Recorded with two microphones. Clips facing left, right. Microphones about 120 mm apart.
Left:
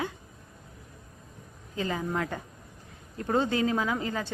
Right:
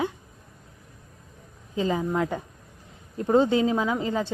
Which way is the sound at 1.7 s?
20° right (ahead or behind).